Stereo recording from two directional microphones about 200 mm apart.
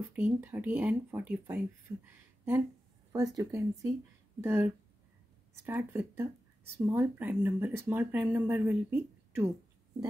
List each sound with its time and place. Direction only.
0.1 s speech: 10° right (ahead or behind)